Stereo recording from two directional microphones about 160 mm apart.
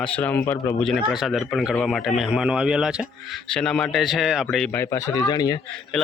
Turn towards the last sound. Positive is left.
turn(degrees=25)  # may be behind; listen again after turning